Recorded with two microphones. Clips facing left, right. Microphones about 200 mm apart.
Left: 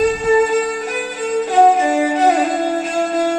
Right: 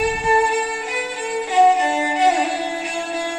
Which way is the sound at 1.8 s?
50° left (ahead or behind).